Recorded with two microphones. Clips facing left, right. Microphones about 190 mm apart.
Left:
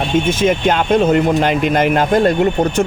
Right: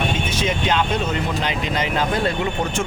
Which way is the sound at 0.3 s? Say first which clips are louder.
Left 8 dB; 50° left (ahead or behind).